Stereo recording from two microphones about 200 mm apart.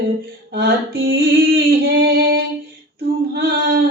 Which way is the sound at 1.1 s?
50° right (ahead or behind).